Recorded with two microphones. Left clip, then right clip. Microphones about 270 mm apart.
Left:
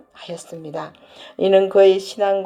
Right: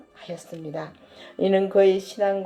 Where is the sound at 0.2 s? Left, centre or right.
Left.